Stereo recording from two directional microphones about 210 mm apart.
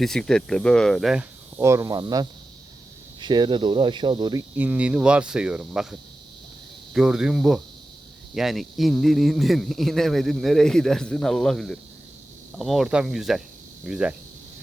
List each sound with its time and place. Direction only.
0.0 s speech: centre (ahead or behind)
1.5 s speech: 15° right (ahead or behind)
4.5 s speech: 5° right (ahead or behind)